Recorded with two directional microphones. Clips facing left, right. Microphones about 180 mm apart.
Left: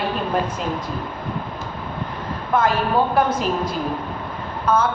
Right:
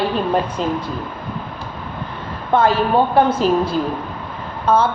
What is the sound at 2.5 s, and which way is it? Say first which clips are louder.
A man's voice: right 4 dB; 30° right (ahead or behind).